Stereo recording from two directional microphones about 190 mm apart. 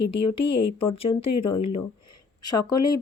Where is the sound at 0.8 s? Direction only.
30° left (ahead or behind).